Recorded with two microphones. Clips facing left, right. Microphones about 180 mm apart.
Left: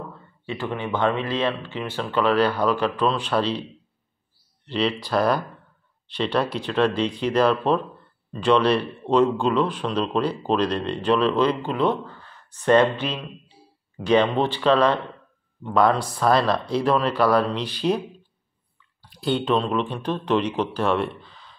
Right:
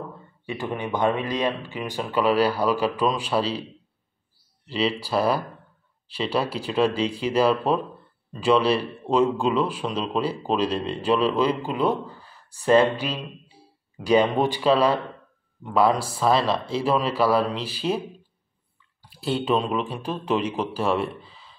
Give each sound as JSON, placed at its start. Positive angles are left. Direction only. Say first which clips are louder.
{"t": 0.5, "sound": "speech", "louder": "left 1 dB", "side_deg": -15}
{"t": 4.6, "sound": "speech", "louder": "left 1 dB", "side_deg": -5}